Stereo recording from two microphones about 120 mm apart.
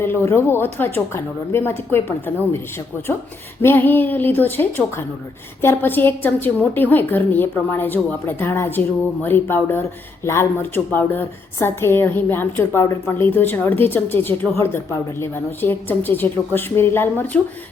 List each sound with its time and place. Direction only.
0.0 s speech: 20° left (ahead or behind)
3.6 s a woman's voice: 15° left (ahead or behind)